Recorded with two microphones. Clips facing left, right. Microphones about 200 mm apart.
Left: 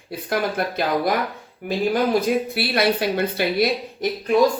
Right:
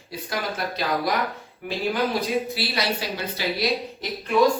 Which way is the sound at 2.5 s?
55° left (ahead or behind).